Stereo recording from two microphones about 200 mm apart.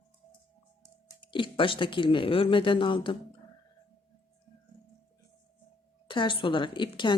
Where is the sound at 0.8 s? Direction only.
20° left (ahead or behind).